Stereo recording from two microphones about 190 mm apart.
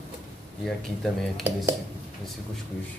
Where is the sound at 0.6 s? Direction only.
Centre (ahead or behind).